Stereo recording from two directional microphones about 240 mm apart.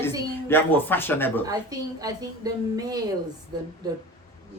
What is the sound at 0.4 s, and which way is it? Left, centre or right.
Speech, centre.